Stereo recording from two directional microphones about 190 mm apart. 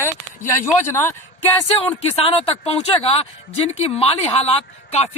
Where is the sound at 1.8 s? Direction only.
30° left (ahead or behind).